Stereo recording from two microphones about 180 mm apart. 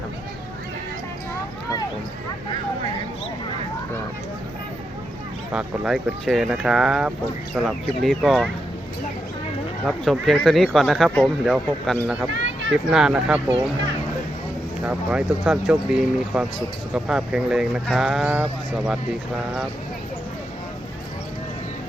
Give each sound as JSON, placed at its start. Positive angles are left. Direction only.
{"t": 5.5, "sound": "speech", "side_deg": 0}
{"t": 9.8, "sound": "speech", "side_deg": 0}
{"t": 12.3, "sound": "a sound", "side_deg": -85}
{"t": 12.7, "sound": "speech", "side_deg": 0}
{"t": 14.8, "sound": "speech", "side_deg": -5}